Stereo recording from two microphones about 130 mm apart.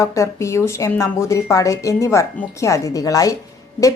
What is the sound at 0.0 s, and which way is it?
A woman's voice, 25° left (ahead or behind).